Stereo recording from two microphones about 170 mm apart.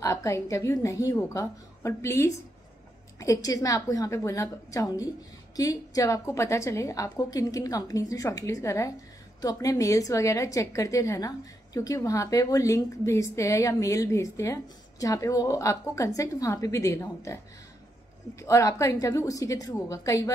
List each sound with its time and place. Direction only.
0.0 s a woman's voice: 15° left (ahead or behind)
18.4 s a woman's voice: 20° left (ahead or behind)